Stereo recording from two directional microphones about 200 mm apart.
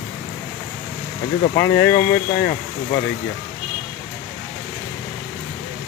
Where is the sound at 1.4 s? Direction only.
40° left (ahead or behind).